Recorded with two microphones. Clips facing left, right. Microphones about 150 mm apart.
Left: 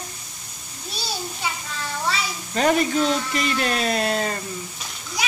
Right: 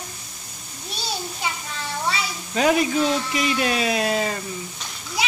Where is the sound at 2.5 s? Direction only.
5° right (ahead or behind).